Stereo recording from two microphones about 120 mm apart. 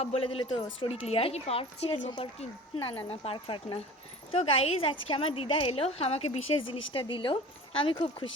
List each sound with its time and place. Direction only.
0.0 s a woman's voice: 55° left (ahead or behind)